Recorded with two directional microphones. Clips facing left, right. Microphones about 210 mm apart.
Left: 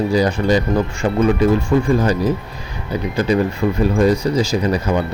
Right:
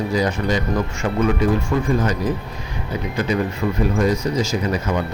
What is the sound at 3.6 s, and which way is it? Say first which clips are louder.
Speech: left 3 dB; 35° left (ahead or behind).